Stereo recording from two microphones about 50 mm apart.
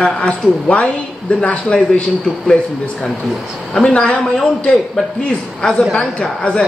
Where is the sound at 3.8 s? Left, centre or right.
Centre.